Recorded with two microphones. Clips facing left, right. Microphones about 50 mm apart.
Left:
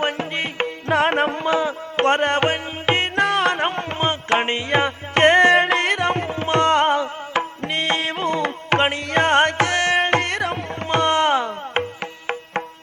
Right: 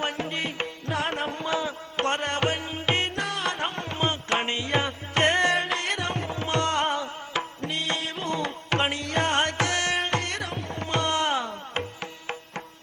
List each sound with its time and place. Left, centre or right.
0.0 s music: left
0.9 s music: left
3.2 s music: left
5.6 s music: left